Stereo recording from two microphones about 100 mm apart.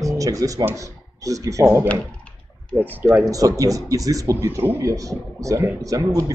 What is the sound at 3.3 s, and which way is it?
Speech, 35° right (ahead or behind).